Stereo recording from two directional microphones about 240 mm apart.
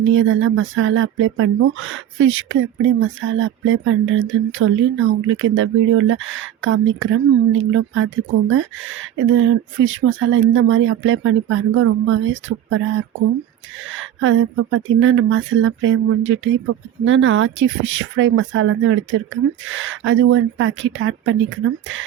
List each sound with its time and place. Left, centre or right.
0.0 s speech: right